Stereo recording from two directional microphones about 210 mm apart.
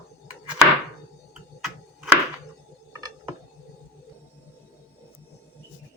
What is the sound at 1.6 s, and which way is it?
Tick-tock, centre (ahead or behind).